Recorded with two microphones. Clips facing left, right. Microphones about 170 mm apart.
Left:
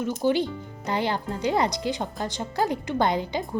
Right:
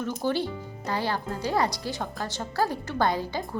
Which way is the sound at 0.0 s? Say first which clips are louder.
Left 4 dB; 15° left (ahead or behind).